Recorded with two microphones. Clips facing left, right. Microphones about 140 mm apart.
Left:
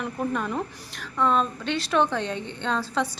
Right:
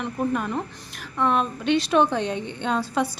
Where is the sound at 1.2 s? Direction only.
15° right (ahead or behind).